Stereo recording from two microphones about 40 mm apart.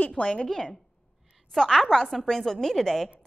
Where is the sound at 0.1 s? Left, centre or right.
Left.